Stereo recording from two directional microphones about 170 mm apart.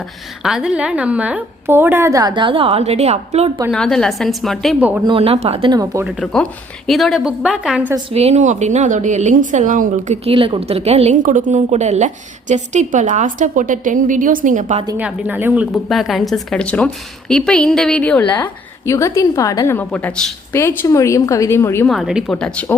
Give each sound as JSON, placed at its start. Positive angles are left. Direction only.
{"t": 0.4, "sound": "a woman's voice", "side_deg": -5}
{"t": 3.7, "sound": "a woman's voice", "side_deg": 5}
{"t": 5.0, "sound": "speech", "side_deg": -35}
{"t": 5.7, "sound": "speech", "side_deg": -20}
{"t": 6.1, "sound": "a woman's voice", "side_deg": 0}
{"t": 8.1, "sound": "a woman's voice", "side_deg": -40}
{"t": 10.2, "sound": "a woman's voice", "side_deg": -30}
{"t": 14.9, "sound": "a woman's voice", "side_deg": -10}
{"t": 18.9, "sound": "a woman's voice", "side_deg": 20}
{"t": 21.8, "sound": "a woman's voice", "side_deg": 0}